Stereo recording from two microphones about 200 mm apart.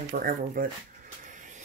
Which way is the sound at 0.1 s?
45° right (ahead or behind).